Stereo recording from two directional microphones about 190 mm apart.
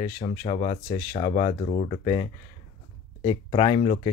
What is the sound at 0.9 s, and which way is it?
Speech, 45° left (ahead or behind).